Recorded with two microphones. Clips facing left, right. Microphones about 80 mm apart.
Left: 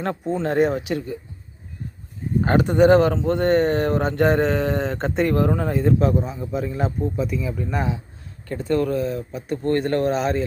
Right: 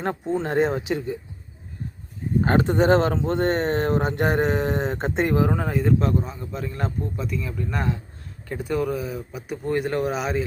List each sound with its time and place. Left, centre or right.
0.4 s speech: right
2.4 s speech: right
5.6 s speech: centre
8.4 s speech: centre